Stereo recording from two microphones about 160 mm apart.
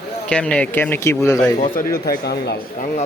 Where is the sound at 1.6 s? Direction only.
55° left (ahead or behind); by 2.6 s 90° left.